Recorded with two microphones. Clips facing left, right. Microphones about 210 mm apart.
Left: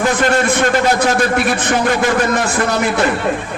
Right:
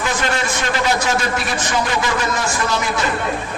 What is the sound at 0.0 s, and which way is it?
A man's voice, 55° left (ahead or behind).